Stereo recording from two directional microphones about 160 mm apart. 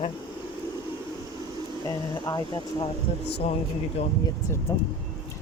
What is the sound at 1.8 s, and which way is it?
Speech, 25° left (ahead or behind).